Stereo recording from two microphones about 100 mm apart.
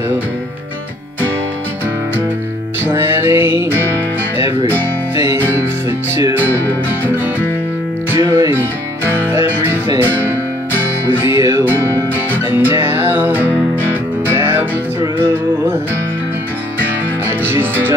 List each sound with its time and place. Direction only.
2.8 s music: 25° right (ahead or behind)
5.1 s music: 25° right (ahead or behind)
6.4 s music: 20° left (ahead or behind)
8.2 s music: 30° right (ahead or behind)
11.1 s music: 25° right (ahead or behind)
17.4 s music: 20° right (ahead or behind)